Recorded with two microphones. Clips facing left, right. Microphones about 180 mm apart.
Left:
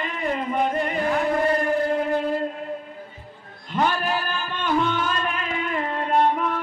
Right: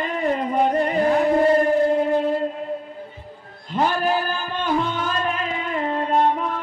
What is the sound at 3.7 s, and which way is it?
Music, 35° right (ahead or behind).